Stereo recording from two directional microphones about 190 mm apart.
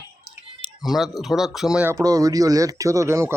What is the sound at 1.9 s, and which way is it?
Speech, 20° right (ahead or behind).